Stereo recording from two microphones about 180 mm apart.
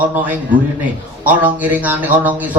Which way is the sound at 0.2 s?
10° right (ahead or behind).